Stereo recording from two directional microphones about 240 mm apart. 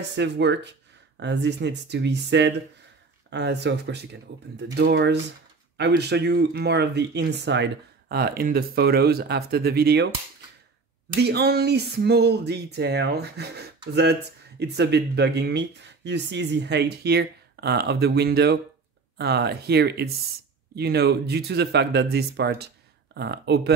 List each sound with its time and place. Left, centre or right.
0.1 s speech: right
11.1 s speech: right